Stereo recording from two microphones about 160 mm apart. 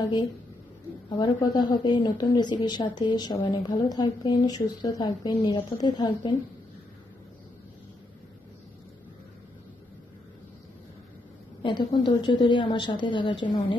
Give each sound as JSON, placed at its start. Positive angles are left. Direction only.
{"t": 1.1, "sound": "speech", "side_deg": 25}
{"t": 11.6, "sound": "speech", "side_deg": 30}